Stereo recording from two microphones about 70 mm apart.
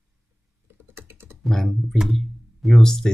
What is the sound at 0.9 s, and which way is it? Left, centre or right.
Typing, right.